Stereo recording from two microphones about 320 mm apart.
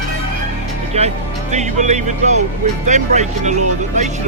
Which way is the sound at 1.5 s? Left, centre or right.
Right.